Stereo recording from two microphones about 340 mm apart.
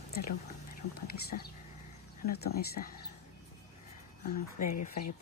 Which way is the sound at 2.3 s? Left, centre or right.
Left.